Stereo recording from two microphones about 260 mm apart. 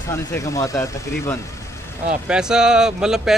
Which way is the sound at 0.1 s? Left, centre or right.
Centre.